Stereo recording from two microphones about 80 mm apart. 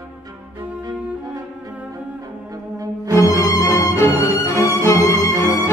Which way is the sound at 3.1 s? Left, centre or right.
Left.